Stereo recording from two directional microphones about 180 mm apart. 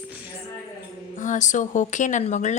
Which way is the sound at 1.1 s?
45° left (ahead or behind).